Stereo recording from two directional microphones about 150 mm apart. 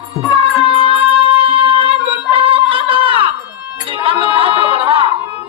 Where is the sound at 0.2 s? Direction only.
30° left (ahead or behind).